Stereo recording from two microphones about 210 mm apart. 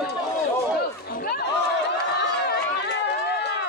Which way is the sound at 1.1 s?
45° left (ahead or behind).